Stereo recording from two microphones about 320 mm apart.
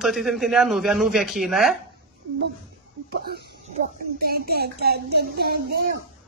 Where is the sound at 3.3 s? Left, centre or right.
Right.